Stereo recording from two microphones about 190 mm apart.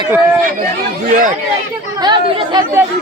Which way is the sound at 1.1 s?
45° right (ahead or behind).